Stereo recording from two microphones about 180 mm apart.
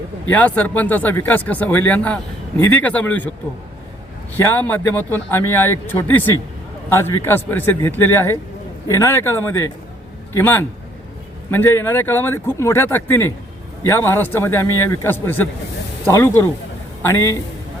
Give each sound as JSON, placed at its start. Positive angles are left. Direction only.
{"t": 0.3, "sound": "speech", "side_deg": 10}
{"t": 4.4, "sound": "speech", "side_deg": 10}